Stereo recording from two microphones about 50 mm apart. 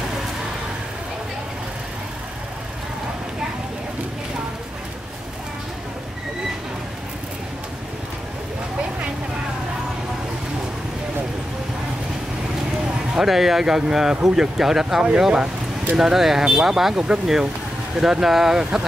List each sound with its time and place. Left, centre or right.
13.2 s speech: centre